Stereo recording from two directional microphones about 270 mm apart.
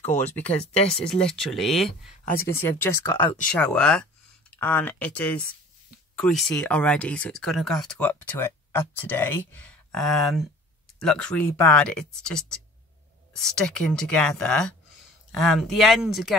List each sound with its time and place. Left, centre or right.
0.0 s speech: left
1.0 s speech: centre
2.2 s speech: left
2.6 s speech: centre
3.4 s speech: centre